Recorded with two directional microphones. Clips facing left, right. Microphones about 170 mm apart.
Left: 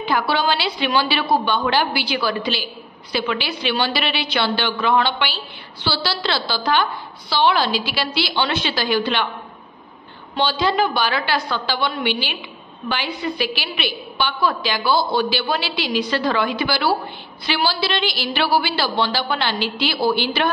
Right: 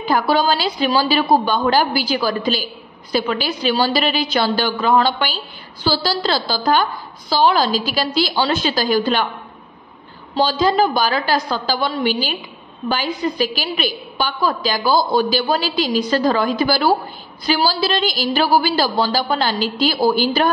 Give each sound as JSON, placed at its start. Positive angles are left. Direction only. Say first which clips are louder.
{"t": 0.0, "sound": "a woman's voice", "louder": "right 3 dB", "side_deg": -40}
{"t": 10.3, "sound": "a woman's voice", "louder": "right 3 dB", "side_deg": -40}